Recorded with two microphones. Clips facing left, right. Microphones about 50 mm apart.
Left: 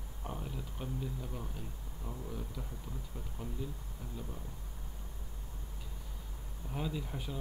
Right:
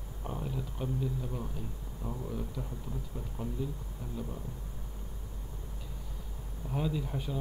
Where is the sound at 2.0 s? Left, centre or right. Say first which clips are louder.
Right 6 dB; centre.